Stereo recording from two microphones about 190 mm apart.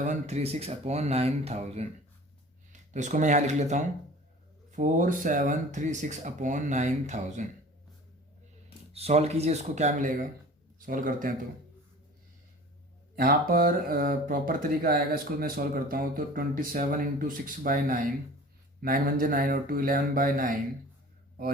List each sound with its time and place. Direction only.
0.0 s speech: 40° right (ahead or behind)
2.9 s speech: 40° right (ahead or behind)
8.9 s speech: 35° right (ahead or behind)
13.1 s speech: 50° right (ahead or behind)